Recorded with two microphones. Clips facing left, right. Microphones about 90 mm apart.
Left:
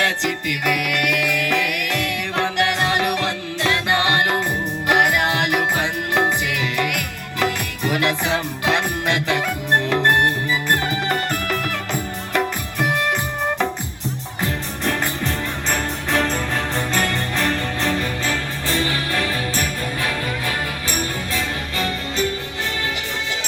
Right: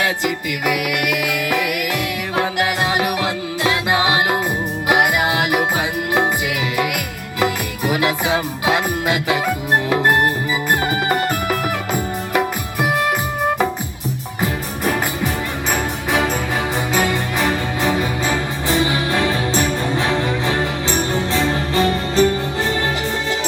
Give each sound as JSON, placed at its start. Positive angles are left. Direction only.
{"t": 0.0, "sound": "music", "side_deg": -5}
{"t": 6.7, "sound": "music", "side_deg": -5}
{"t": 14.4, "sound": "music", "side_deg": -5}